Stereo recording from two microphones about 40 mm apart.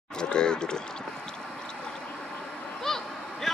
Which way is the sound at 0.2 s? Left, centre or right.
Left.